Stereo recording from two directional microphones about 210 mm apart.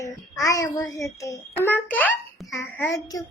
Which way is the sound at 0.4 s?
15° left (ahead or behind).